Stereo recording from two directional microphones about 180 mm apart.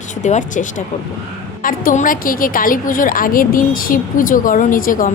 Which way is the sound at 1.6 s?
50° left (ahead or behind).